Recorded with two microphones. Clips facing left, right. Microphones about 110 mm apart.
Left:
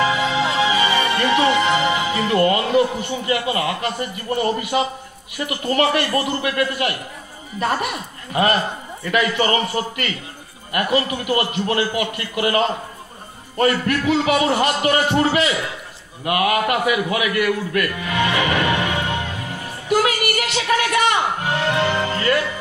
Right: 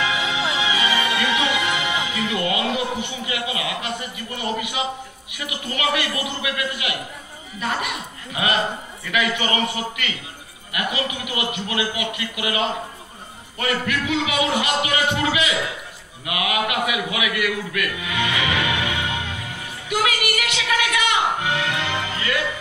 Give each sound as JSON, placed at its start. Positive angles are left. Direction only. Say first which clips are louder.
{"t": 0.0, "sound": "a man's voice", "louder": "left 5 dB", "side_deg": 45}